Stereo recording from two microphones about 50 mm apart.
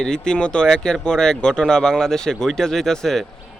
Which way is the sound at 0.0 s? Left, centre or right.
Centre.